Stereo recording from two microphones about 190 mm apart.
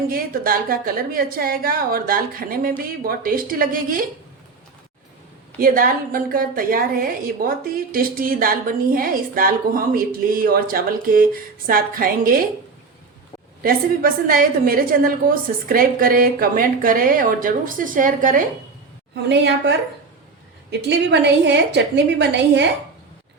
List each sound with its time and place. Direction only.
0.1 s a woman's voice: 50° right (ahead or behind)
5.5 s a woman's voice: 50° right (ahead or behind)
13.6 s a woman's voice: 50° right (ahead or behind)
19.1 s a woman's voice: 65° right (ahead or behind)